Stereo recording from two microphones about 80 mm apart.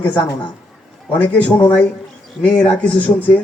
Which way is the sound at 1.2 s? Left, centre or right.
Left.